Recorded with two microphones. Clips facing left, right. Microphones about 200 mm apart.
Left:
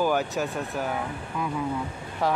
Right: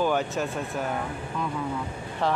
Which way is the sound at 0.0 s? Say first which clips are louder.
Even; 5° left (ahead or behind).